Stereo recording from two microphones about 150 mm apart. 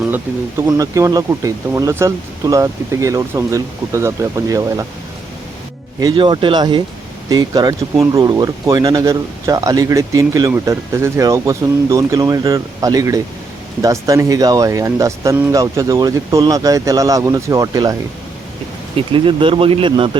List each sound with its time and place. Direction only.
0.0 s speech: 15° right (ahead or behind)
6.0 s speech: 30° right (ahead or behind)
18.9 s speech: 35° right (ahead or behind)